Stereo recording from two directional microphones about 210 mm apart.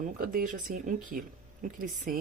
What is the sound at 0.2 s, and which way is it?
Speech, 40° right (ahead or behind).